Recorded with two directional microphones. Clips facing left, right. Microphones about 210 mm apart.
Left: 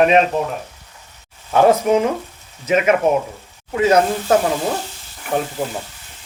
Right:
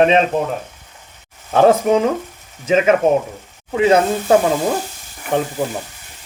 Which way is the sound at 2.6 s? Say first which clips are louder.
Right 2 dB; 25° right (ahead or behind).